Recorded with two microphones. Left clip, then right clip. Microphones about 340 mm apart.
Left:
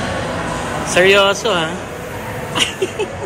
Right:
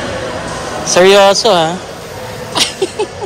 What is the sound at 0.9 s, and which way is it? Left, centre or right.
Speech, right.